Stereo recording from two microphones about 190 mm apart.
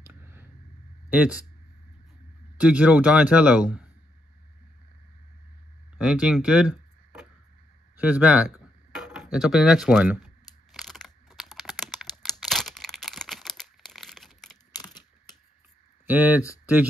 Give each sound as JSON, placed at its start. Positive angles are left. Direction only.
{"t": 0.0, "sound": "a sound", "side_deg": -10}
{"t": 2.5, "sound": "a man's voice", "side_deg": -5}
{"t": 5.9, "sound": "a man's voice", "side_deg": -5}
{"t": 8.9, "sound": "a sound", "side_deg": 0}
{"t": 14.7, "sound": "computer keyboard", "side_deg": 20}
{"t": 16.1, "sound": "a man's voice", "side_deg": -10}